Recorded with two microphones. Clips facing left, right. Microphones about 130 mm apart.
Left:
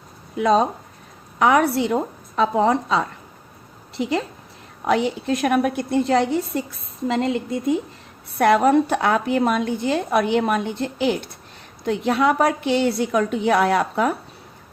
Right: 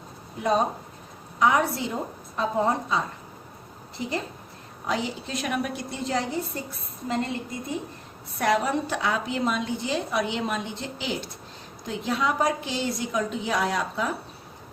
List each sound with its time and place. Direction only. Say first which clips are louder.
0.3 s speech: left 7 dB; 90° left
1.4 s a woman's voice: left 5 dB; 65° left (ahead or behind)
4.9 s a woman's voice: left 9 dB; 60° left (ahead or behind)
8.4 s a woman's voice: left 8 dB; 55° left (ahead or behind)